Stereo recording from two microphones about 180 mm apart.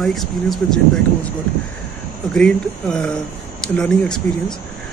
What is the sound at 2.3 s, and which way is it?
Speech, 5° left (ahead or behind).